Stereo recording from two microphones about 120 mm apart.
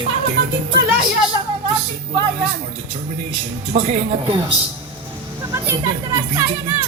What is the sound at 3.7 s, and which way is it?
Speech, 55° right (ahead or behind).